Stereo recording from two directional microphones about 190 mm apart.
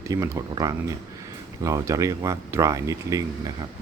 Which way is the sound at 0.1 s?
20° right (ahead or behind).